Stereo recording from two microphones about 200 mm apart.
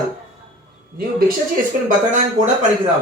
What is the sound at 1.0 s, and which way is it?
Speech, 45° right (ahead or behind).